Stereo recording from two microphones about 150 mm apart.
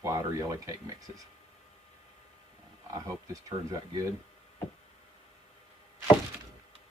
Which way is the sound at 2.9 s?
25° right (ahead or behind).